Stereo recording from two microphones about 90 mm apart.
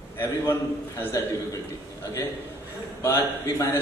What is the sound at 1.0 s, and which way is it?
Speech, 35° left (ahead or behind).